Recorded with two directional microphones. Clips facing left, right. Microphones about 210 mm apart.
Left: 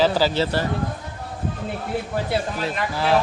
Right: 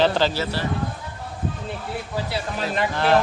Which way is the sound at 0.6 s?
50° left (ahead or behind).